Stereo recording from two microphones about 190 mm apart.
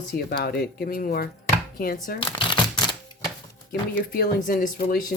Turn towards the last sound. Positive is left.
turn(degrees=45)  # may be behind; listen again after turning